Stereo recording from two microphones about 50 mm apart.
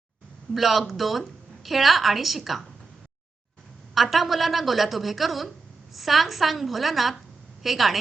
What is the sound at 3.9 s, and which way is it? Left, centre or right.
A woman's voice, centre.